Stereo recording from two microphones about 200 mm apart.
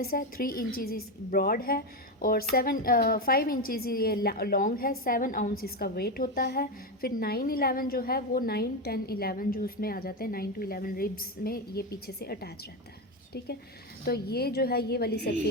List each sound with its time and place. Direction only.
0.0 s a woman's voice: 45° left (ahead or behind)
14.0 s a woman's voice: 50° left (ahead or behind)